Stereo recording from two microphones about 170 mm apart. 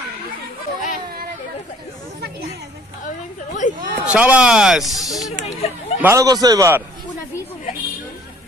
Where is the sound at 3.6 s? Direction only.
50° left (ahead or behind).